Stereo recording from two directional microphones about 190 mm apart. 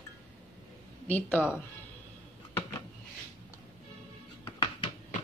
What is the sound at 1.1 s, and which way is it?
Speech, 10° left (ahead or behind).